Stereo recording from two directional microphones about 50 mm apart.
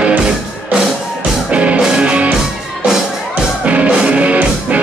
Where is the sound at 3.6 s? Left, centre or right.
Right.